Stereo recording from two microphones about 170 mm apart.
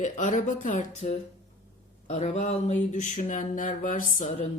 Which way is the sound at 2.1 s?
40° left (ahead or behind).